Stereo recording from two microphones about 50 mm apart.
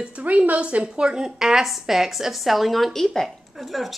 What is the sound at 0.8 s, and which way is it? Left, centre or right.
A woman's voice, centre.